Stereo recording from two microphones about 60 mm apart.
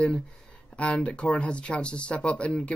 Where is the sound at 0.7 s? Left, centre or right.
Centre.